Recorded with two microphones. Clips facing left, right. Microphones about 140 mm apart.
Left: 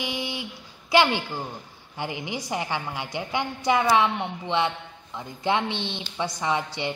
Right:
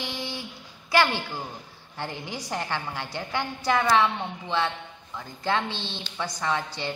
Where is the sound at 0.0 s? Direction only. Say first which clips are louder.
Left 3 dB; 15° left (ahead or behind).